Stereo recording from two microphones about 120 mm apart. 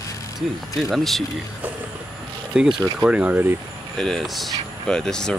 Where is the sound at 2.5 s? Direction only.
5° right (ahead or behind).